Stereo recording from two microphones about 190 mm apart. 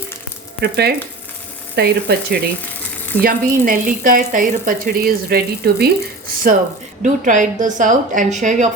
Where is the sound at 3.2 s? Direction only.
50° right (ahead or behind).